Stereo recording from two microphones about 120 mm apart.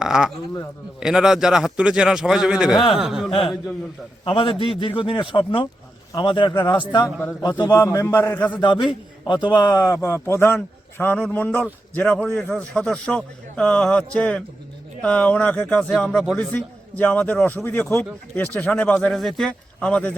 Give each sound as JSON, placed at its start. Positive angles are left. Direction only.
{"t": 0.0, "sound": "a man's voice", "side_deg": -5}
{"t": 3.2, "sound": "speech", "side_deg": 50}
{"t": 7.0, "sound": "a man's voice", "side_deg": 15}
{"t": 7.6, "sound": "a man's voice", "side_deg": 30}
{"t": 8.6, "sound": "a man's voice", "side_deg": 40}